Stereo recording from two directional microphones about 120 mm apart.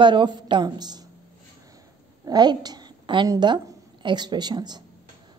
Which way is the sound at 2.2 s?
35° right (ahead or behind).